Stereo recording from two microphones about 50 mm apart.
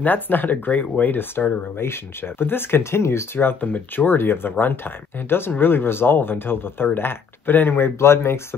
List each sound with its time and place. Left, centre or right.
0.0 s speech: left
3.3 s speech: left
8.0 s speech: left